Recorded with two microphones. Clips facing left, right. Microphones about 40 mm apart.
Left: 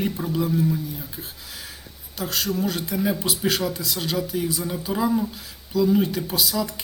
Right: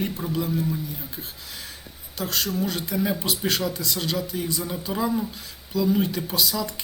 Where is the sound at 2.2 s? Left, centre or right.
Centre.